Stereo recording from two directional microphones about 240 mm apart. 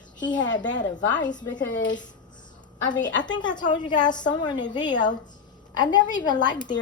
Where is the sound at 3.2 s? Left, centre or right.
Centre.